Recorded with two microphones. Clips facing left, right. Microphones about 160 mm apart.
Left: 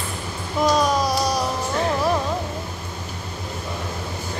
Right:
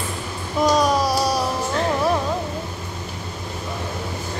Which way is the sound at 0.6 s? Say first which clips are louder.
Right 1 dB; centre (ahead or behind).